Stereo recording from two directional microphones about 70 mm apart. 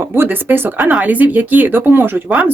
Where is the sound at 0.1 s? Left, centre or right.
Right.